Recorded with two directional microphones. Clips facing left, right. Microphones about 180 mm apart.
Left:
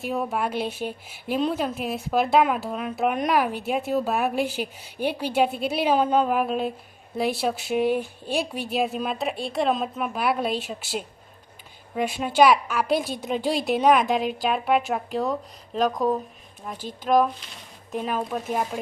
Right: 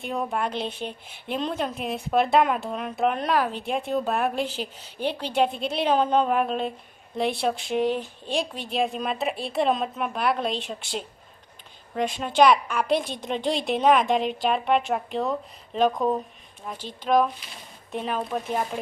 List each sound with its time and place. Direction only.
0.0 s a woman's voice: 5° left (ahead or behind)
16.7 s speech: 45° left (ahead or behind)
17.1 s a woman's voice: centre (ahead or behind)